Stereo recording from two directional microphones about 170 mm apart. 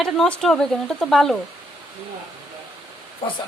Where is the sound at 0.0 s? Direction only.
5° left (ahead or behind).